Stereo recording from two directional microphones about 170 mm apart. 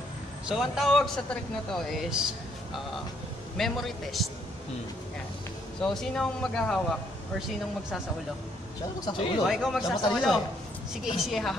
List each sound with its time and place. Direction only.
0.5 s speech: centre (ahead or behind)
5.8 s speech: 5° left (ahead or behind)
9.0 s speech: 30° left (ahead or behind)
9.5 s speech: centre (ahead or behind)